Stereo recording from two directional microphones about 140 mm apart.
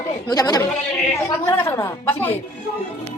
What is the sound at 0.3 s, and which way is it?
A woman's voice, 30° left (ahead or behind).